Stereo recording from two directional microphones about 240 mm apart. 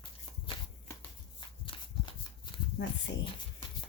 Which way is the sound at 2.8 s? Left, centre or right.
Left.